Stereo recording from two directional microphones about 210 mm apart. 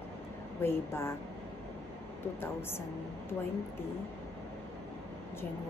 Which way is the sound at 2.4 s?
10° left (ahead or behind).